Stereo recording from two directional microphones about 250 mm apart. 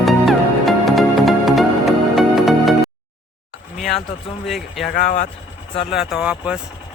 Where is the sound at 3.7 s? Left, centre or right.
Centre.